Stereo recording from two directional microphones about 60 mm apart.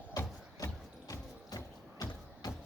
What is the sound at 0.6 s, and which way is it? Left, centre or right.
Music, left.